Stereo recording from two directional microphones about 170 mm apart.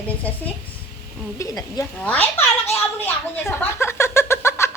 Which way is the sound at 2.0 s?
10° left (ahead or behind).